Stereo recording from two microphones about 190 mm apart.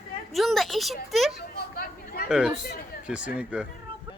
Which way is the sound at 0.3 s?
Centre (ahead or behind).